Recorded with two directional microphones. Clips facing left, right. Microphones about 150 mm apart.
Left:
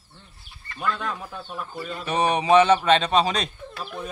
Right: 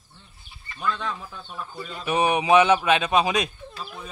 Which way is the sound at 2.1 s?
10° right (ahead or behind).